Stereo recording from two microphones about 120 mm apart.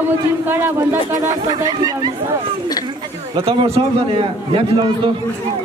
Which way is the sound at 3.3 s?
45° right (ahead or behind).